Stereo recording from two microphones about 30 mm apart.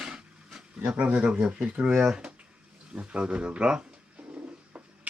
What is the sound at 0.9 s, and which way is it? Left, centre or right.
Speech, right.